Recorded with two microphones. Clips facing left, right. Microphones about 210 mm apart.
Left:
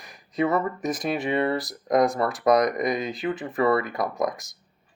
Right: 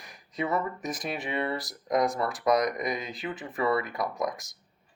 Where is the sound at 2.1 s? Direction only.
55° left (ahead or behind).